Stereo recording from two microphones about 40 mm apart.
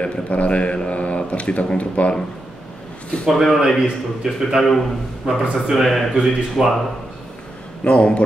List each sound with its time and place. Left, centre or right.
0.0 s a man's voice: left
3.3 s speech: centre
3.8 s speech: centre
4.6 s a man's voice: centre
5.2 s speech: centre
7.8 s a man's voice: left